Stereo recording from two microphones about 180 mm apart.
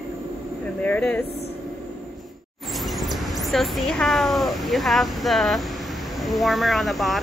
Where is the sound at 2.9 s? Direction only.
Centre (ahead or behind).